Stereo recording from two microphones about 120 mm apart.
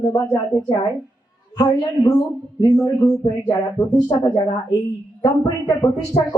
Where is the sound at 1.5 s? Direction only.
30° left (ahead or behind).